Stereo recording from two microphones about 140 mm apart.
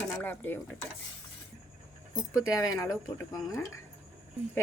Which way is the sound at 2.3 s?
25° left (ahead or behind).